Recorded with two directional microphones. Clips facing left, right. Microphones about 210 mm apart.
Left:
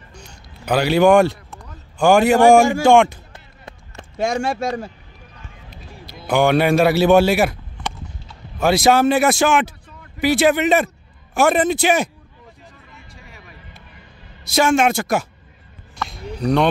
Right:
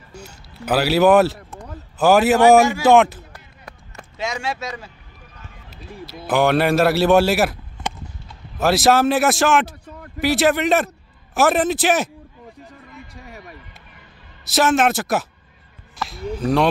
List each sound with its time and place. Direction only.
0.1 s music: 5° right (ahead or behind)
2.0 s a man's voice: 5° right (ahead or behind)
4.2 s speech: 50° left (ahead or behind)
6.2 s a man's voice: centre (ahead or behind)
8.5 s a man's voice: centre (ahead or behind)
9.8 s a sound: 50° right (ahead or behind)
10.2 s a man's voice: centre (ahead or behind)
13.3 s a sound: 40° right (ahead or behind)
14.4 s a man's voice: centre (ahead or behind)
16.0 s a sound: centre (ahead or behind)